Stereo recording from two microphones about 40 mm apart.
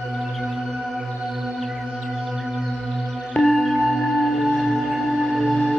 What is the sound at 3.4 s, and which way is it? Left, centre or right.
Music, centre.